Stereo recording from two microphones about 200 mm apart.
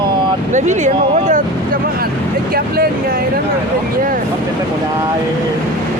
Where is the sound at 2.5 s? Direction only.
50° right (ahead or behind).